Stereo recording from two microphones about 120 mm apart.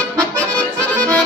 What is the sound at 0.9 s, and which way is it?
Accordion, 10° left (ahead or behind).